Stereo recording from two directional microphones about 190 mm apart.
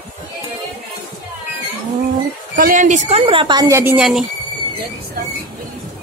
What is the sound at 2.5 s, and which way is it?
Speech, 45° right (ahead or behind).